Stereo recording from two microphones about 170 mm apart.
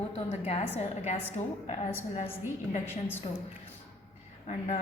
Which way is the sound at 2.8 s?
10° left (ahead or behind).